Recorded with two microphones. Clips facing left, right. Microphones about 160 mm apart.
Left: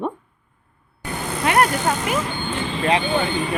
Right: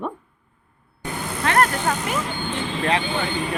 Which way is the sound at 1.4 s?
15° left (ahead or behind).